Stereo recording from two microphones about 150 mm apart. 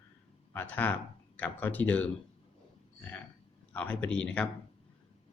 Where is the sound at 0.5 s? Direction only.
10° left (ahead or behind).